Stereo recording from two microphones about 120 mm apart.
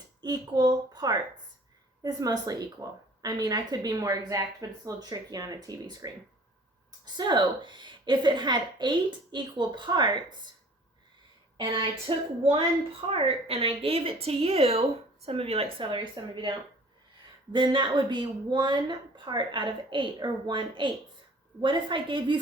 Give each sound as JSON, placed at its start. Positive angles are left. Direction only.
{"t": 0.2, "sound": "a woman's voice", "side_deg": -35}
{"t": 11.5, "sound": "a woman's voice", "side_deg": -45}